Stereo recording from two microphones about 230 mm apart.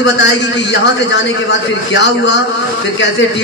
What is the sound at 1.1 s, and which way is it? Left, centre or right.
A man's voice, left.